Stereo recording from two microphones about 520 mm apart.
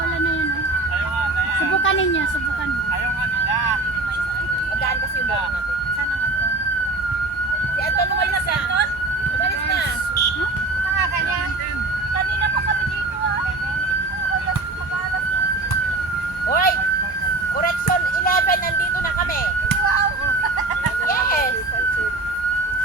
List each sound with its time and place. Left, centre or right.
1.7 s emergency vehicle: left
16.5 s emergency vehicle: centre
17.6 s a sound: centre
21.1 s emergency vehicle: centre